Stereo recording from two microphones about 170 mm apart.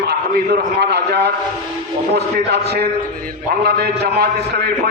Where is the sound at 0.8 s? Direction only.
80° right.